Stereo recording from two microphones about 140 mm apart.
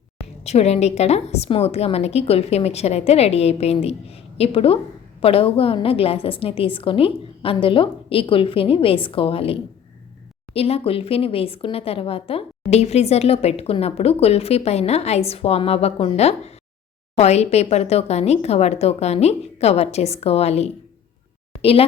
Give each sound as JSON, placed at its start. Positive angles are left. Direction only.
{"t": 0.4, "sound": "a woman's voice", "side_deg": 50}